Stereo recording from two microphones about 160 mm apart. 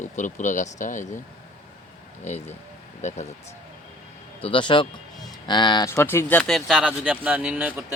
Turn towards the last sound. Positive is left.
turn(degrees=-10)  # may be behind; listen again after turning